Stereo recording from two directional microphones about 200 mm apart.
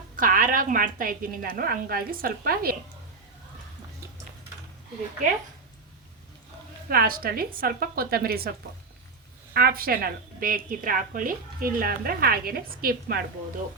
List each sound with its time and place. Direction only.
0.2 s a woman's voice: 45° right (ahead or behind)
6.8 s a woman's voice: 45° right (ahead or behind)